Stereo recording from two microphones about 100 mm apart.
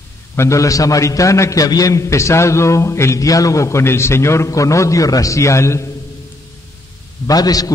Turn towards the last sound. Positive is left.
turn(degrees=40)  # may be behind; listen again after turning